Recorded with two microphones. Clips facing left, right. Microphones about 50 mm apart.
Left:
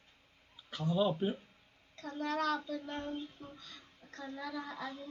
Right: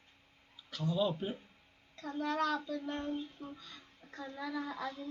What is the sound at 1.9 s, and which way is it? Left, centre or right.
Speech, centre.